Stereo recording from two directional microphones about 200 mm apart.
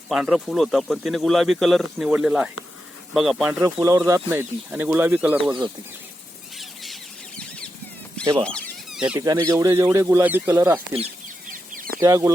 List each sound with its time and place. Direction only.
0.1 s speech: 5° right (ahead or behind)
3.8 s speech: 15° right (ahead or behind)
5.5 s speech: 20° right (ahead or behind)
6.6 s a sound: centre (ahead or behind)
8.2 s speech: 20° right (ahead or behind)
8.4 s a sound: 5° left (ahead or behind)
9.2 s speech: 15° right (ahead or behind)
11.5 s chicken: 45° right (ahead or behind)
11.9 s speech: 15° right (ahead or behind)